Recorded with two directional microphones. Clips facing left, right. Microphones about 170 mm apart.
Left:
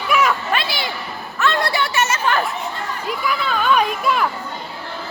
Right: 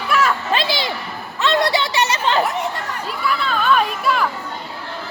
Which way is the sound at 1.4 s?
20° right (ahead or behind).